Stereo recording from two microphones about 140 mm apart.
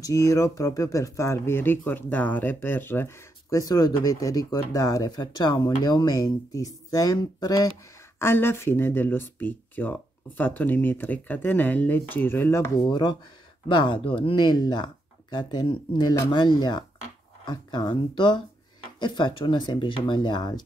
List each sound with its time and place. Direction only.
0.0 s speech: 25° left (ahead or behind)
8.2 s speech: 15° left (ahead or behind)
13.7 s speech: 35° left (ahead or behind)